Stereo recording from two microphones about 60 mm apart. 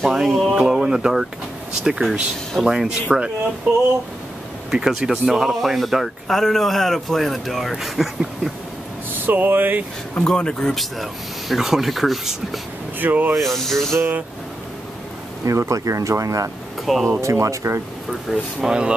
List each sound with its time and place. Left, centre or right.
0.0 s a sound: centre
0.5 s speech: centre
4.6 s speech: centre
9.1 s speech: right
10.1 s speech: centre
13.0 s speech: right
13.4 s speech: centre
15.4 s speech: right
16.8 s speech: centre
17.2 s speech: right
18.3 s speech: centre